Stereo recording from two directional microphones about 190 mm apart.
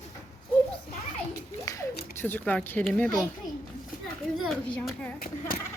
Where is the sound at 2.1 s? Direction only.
10° left (ahead or behind).